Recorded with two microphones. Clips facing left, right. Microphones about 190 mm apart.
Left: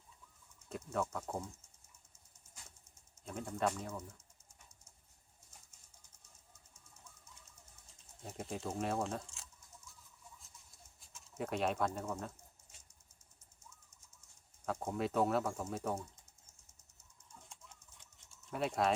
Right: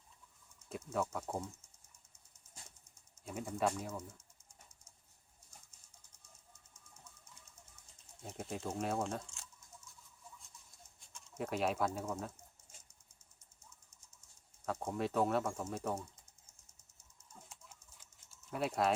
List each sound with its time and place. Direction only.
0.7 s speech: centre (ahead or behind)
3.2 s speech: 5° right (ahead or behind)
8.2 s speech: centre (ahead or behind)
11.0 s speech: centre (ahead or behind)
14.6 s speech: centre (ahead or behind)
17.5 s typing: 5° right (ahead or behind)